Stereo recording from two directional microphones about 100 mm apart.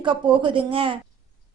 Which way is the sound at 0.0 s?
60° right (ahead or behind).